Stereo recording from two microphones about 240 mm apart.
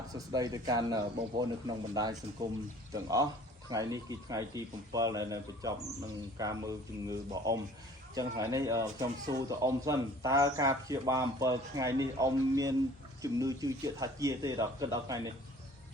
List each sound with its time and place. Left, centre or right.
0.1 s speech: centre